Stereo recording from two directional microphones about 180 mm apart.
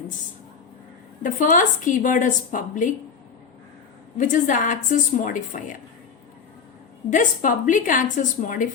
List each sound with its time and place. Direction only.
1.2 s a woman's voice: 45° left (ahead or behind)
4.2 s a woman's voice: 45° left (ahead or behind)
7.1 s a woman's voice: 45° left (ahead or behind)